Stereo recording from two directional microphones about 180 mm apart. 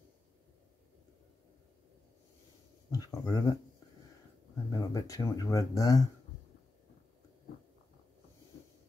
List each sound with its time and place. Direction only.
2.9 s speech: 20° left (ahead or behind)
4.6 s speech: 20° left (ahead or behind)